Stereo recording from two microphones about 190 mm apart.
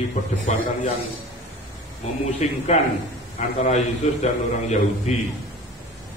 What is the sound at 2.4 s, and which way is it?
A man's voice, 35° left (ahead or behind).